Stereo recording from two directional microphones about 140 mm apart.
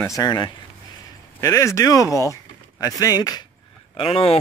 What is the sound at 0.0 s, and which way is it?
Speech, 25° left (ahead or behind).